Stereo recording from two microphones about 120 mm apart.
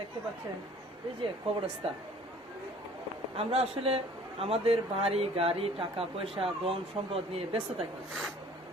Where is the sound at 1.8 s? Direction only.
50° right (ahead or behind).